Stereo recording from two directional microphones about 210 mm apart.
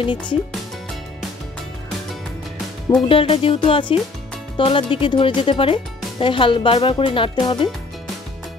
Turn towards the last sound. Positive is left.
turn(degrees=20)  # may be behind; listen again after turning